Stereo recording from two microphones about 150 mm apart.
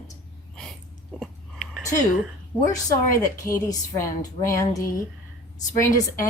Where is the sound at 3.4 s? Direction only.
20° left (ahead or behind).